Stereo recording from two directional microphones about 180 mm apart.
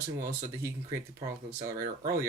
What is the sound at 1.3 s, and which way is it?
Speech, 20° right (ahead or behind).